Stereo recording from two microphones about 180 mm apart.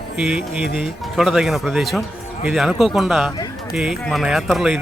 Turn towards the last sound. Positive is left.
turn(degrees=0)  # may be behind; listen again after turning